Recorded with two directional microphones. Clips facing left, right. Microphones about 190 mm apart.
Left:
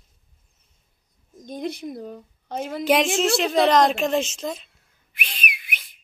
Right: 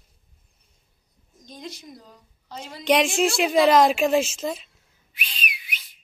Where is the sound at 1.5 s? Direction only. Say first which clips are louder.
Left 9 dB; 55° left (ahead or behind).